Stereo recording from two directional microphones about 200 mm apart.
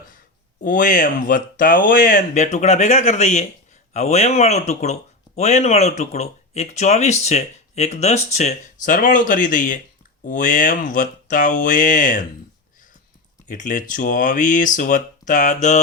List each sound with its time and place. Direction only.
0.6 s speech: 40° left (ahead or behind)
13.5 s speech: 40° left (ahead or behind)